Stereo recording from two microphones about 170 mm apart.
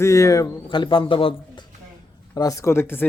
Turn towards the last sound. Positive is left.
turn(degrees=15)  # may be behind; listen again after turning